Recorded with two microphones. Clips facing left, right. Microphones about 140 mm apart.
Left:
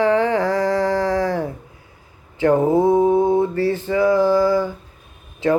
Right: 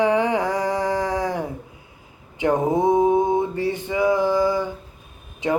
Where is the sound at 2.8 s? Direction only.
15° right (ahead or behind).